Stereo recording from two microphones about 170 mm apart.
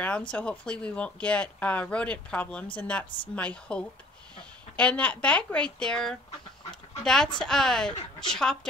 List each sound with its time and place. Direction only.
0.3 s speech: 5° left (ahead or behind)
6.7 s dog: 5° left (ahead or behind)
7.3 s speech: 5° left (ahead or behind)